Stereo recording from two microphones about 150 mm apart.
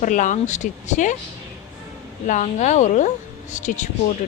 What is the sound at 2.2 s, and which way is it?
Speech, 55° left (ahead or behind).